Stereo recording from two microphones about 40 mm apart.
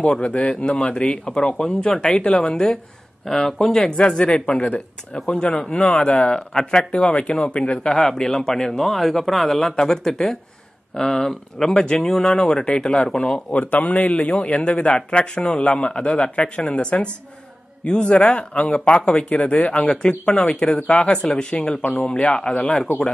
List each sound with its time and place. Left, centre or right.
0.0 s a man's voice: left
0.4 s speech: left
0.7 s a man's voice: left
2.4 s a man's voice: centre
3.5 s a man's voice: centre
4.5 s a man's voice: left
7.9 s a man's voice: centre
11.8 s a man's voice: left
12.1 s a man's voice: centre
12.4 s a man's voice: left
13.5 s a man's voice: left
22.9 s speech: left